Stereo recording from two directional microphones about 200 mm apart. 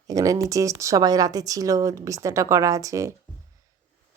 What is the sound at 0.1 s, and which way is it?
Speech, 15° right (ahead or behind).